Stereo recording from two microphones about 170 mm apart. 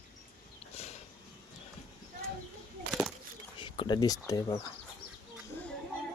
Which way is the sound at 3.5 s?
30° left (ahead or behind).